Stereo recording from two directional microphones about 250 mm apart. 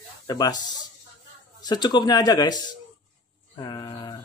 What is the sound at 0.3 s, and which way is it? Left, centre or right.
Speech, centre.